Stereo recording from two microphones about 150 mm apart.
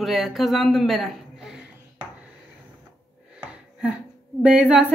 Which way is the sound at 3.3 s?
10° right (ahead or behind).